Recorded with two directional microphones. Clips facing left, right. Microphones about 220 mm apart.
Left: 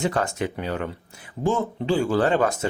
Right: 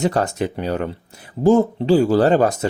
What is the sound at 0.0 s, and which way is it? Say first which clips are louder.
Speech: right 5 dB; 35° right (ahead or behind).